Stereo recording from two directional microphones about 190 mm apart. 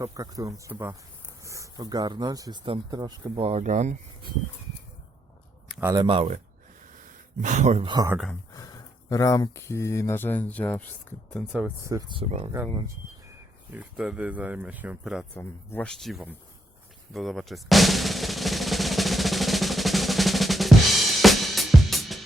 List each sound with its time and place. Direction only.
0.0 s speech: 15° right (ahead or behind); by 3.9 s 40° right (ahead or behind)
5.8 s speech: 20° right (ahead or behind)
7.4 s speech: 40° right (ahead or behind)
7.9 s speech: 20° right (ahead or behind)
8.5 s speech: 20° left (ahead or behind); by 12.2 s 20° right (ahead or behind)
13.7 s speech: 5° right (ahead or behind)
15.4 s speech: 10° left (ahead or behind)
17.2 s drum: centre (ahead or behind)